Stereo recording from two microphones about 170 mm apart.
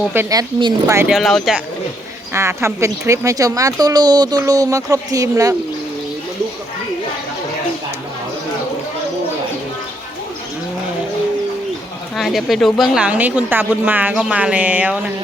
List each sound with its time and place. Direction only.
0.1 s a woman's voice: 15° right (ahead or behind)
1.0 s speech: centre (ahead or behind)
2.3 s speech: 15° right (ahead or behind)
12.1 s a woman's voice: centre (ahead or behind)